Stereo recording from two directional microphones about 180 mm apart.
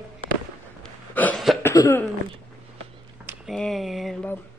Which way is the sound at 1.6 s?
15° left (ahead or behind).